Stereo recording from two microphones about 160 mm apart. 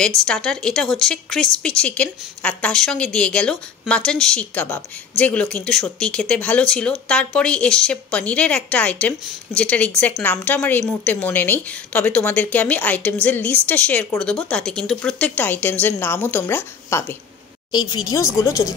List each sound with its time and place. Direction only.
0.2 s a woman's voice: 5° left (ahead or behind)
17.6 s speech: 25° left (ahead or behind)